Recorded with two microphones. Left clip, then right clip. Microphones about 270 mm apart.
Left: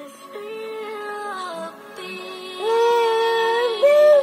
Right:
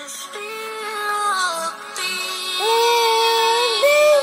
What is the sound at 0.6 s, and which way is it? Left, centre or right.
Music, centre.